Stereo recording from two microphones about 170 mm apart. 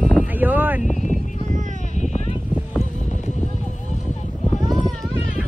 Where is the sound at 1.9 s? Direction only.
45° left (ahead or behind).